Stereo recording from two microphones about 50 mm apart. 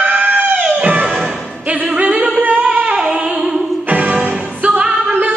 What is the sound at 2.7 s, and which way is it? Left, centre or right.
Singing, right.